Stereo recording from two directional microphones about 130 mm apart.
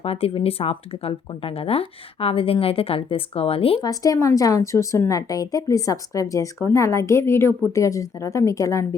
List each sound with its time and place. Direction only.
0.0 s speech: 45° left (ahead or behind)
3.8 s a woman's voice: 30° left (ahead or behind)